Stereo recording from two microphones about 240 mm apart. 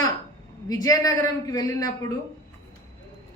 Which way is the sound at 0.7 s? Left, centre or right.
Centre.